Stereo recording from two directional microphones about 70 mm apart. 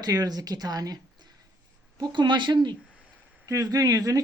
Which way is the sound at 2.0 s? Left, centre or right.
Right.